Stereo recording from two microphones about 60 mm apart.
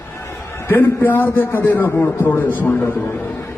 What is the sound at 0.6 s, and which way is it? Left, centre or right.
A man's voice, left.